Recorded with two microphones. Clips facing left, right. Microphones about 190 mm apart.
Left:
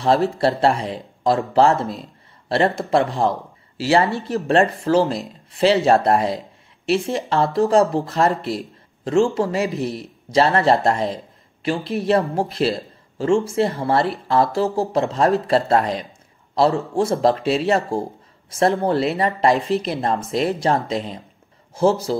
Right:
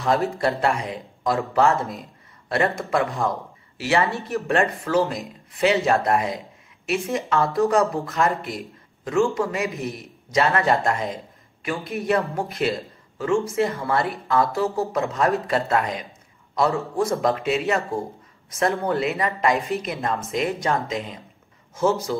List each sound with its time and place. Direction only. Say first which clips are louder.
0.0 s a man's voice: left 4 dB; 30° left (ahead or behind)